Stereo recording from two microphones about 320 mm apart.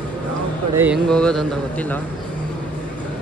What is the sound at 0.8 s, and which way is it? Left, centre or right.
Speech, centre.